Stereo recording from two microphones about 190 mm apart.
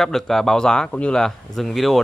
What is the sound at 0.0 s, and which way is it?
Speech, centre (ahead or behind).